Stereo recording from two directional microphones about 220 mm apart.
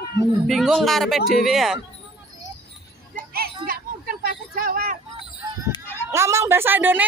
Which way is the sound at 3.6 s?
40° right (ahead or behind).